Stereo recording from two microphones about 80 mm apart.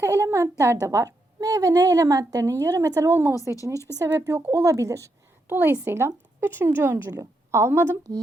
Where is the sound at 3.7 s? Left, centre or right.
Left.